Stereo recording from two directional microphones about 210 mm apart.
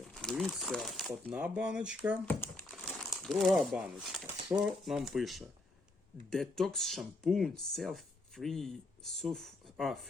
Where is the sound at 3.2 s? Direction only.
Centre (ahead or behind).